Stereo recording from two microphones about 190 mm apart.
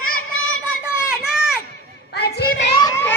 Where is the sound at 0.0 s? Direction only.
90° left.